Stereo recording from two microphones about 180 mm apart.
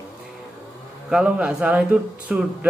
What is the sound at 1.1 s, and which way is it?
Speech, 5° right (ahead or behind).